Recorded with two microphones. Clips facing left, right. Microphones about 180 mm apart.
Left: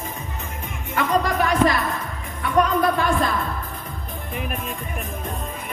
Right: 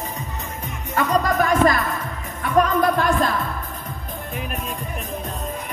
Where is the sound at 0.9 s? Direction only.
45° right (ahead or behind).